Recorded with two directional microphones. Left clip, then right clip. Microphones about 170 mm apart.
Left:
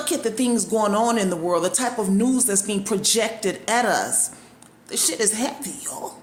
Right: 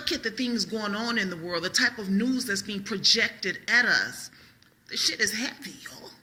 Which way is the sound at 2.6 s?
20° left (ahead or behind).